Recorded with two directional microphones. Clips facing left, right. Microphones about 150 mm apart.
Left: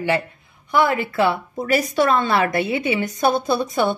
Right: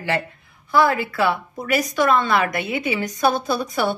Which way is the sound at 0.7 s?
20° left (ahead or behind).